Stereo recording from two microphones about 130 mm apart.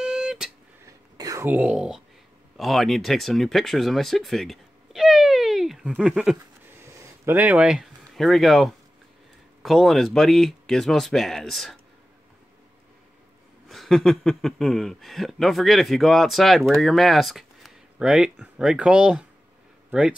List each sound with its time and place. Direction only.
0.0 s guitar: 5° right (ahead or behind)
0.8 s a sound: 25° right (ahead or behind)
1.5 s speech: 10° right (ahead or behind)
6.8 s a sound: 20° right (ahead or behind); by 8.7 s centre (ahead or behind)
9.6 s speech: centre (ahead or behind)
13.7 s speech: centre (ahead or behind)